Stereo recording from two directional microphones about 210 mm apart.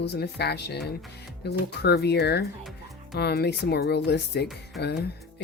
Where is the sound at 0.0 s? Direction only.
50° left (ahead or behind).